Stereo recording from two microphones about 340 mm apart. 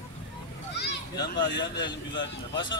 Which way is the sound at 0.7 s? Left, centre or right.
Left.